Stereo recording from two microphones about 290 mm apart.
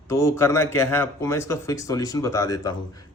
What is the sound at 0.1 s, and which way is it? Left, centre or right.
A man's voice, centre.